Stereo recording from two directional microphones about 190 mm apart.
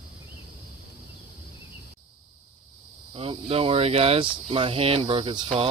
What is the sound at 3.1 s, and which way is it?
Speech, 30° right (ahead or behind).